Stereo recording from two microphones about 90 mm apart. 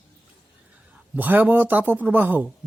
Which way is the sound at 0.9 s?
15° right (ahead or behind).